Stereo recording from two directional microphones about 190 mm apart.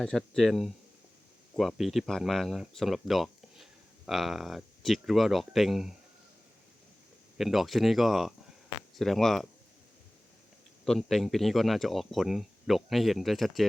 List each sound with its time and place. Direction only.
0.0 s speech: 5° left (ahead or behind)
7.3 s speech: centre (ahead or behind)
10.8 s speech: centre (ahead or behind)